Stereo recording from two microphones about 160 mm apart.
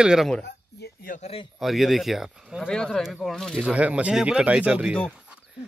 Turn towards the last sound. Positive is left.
turn(degrees=-10)  # may be behind; listen again after turning